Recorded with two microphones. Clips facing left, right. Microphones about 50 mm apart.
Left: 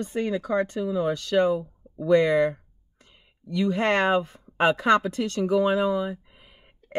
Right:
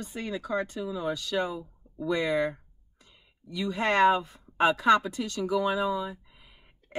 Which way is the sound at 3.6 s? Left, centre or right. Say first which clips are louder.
Left 1 dB; left.